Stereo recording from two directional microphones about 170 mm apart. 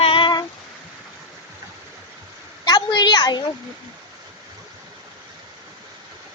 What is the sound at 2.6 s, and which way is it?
Speech, 25° left (ahead or behind).